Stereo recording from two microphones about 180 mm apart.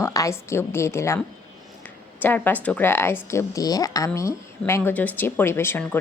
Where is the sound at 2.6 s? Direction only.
10° left (ahead or behind).